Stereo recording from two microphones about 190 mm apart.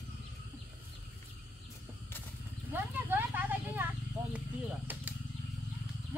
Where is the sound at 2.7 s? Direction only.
10° right (ahead or behind).